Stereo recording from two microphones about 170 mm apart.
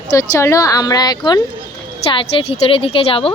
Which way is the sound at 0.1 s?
20° left (ahead or behind).